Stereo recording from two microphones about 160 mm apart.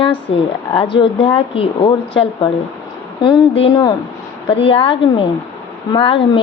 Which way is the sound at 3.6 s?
30° left (ahead or behind).